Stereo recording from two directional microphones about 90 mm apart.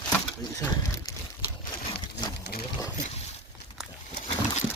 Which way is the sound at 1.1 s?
40° left (ahead or behind).